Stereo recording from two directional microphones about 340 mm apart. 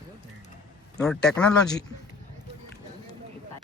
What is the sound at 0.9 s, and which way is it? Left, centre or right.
Speech, centre.